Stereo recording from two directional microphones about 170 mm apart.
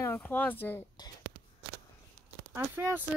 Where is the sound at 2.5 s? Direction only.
15° right (ahead or behind).